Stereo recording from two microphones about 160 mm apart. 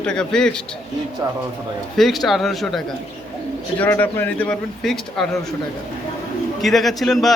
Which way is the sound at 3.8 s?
10° left (ahead or behind).